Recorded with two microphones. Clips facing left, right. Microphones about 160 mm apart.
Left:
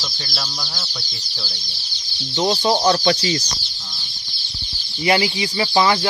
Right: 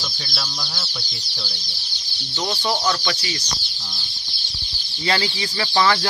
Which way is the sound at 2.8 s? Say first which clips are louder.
Left 7 dB; 35° left (ahead or behind).